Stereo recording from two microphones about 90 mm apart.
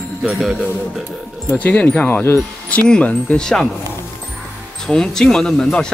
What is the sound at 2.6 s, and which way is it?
Speech, 10° left (ahead or behind).